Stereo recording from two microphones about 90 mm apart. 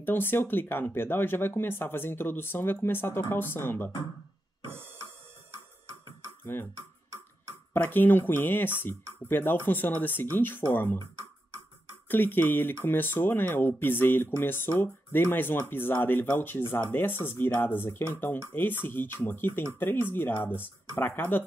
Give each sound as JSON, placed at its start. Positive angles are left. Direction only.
{"t": 0.0, "sound": "speech", "side_deg": 25}
{"t": 4.6, "sound": "a sound", "side_deg": -25}
{"t": 5.5, "sound": "music", "side_deg": -30}
{"t": 6.4, "sound": "speech", "side_deg": 25}
{"t": 7.7, "sound": "speech", "side_deg": 20}
{"t": 12.1, "sound": "speech", "side_deg": 20}